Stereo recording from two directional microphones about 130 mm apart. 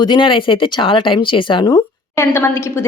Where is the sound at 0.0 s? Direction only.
35° left (ahead or behind).